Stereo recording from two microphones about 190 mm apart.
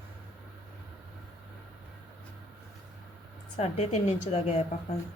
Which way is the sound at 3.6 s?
35° left (ahead or behind).